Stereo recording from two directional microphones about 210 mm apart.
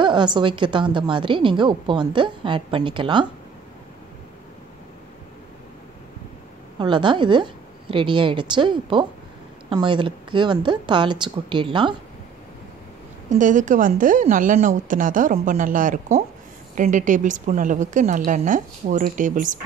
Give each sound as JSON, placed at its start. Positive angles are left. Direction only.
{"t": 0.0, "sound": "a woman's voice", "side_deg": -20}
{"t": 6.8, "sound": "a woman's voice", "side_deg": -20}
{"t": 13.3, "sound": "speech", "side_deg": -35}